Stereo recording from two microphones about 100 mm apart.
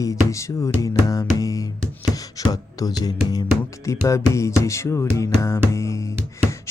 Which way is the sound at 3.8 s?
30° left (ahead or behind).